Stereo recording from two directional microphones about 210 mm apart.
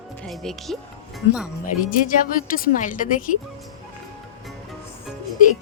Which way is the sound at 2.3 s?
40° left (ahead or behind).